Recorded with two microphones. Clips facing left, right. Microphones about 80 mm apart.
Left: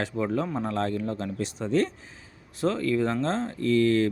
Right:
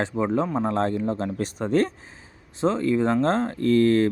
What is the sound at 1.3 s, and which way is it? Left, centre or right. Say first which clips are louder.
Speech: right 2 dB; right.